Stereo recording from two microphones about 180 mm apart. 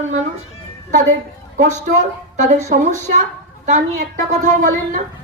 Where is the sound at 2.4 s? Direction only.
40° right (ahead or behind).